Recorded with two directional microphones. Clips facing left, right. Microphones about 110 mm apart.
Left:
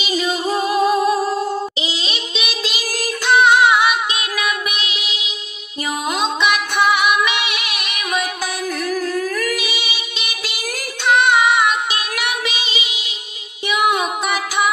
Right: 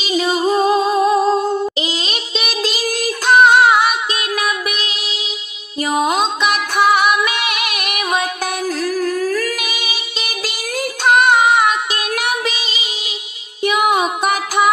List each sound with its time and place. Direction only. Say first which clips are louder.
0.7 s music: right 2 dB; 25° right (ahead or behind)
1.8 s music: right 3 dB; 45° right (ahead or behind)
9.3 s humming: right 2 dB; 30° right (ahead or behind)
9.6 s music: even; 45° right (ahead or behind)
11.1 s child singing: right 2 dB; 45° right (ahead or behind)
13.7 s music: right 3 dB; 45° right (ahead or behind)